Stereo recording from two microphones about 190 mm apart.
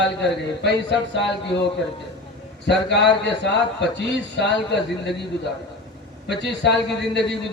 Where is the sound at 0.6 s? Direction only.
65° left (ahead or behind).